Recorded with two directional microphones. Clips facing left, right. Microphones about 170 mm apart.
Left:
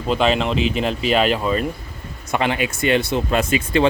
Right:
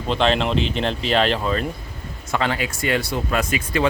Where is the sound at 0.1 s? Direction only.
5° left (ahead or behind).